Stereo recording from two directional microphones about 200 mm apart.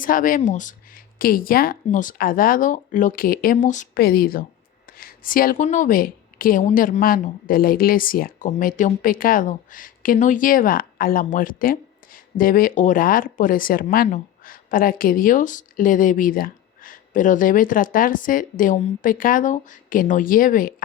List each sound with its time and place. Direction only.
0.0 s speech: 45° left (ahead or behind)